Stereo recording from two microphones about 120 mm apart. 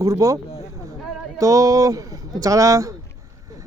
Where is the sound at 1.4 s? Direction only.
30° right (ahead or behind).